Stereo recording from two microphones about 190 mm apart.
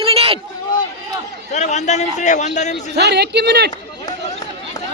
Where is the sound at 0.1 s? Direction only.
30° right (ahead or behind).